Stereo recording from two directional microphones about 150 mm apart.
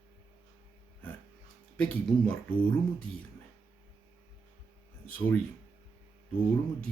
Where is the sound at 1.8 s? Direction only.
5° left (ahead or behind).